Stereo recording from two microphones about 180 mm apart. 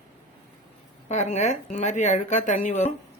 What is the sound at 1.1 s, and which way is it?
Speech, 40° left (ahead or behind).